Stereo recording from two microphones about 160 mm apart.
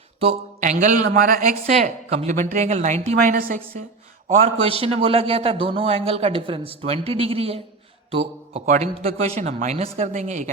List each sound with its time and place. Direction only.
0.6 s speech: 50° right (ahead or behind)
4.4 s a man's voice: 40° right (ahead or behind)